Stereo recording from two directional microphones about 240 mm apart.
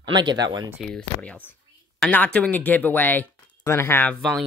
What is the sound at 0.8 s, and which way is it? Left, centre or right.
Speech, centre.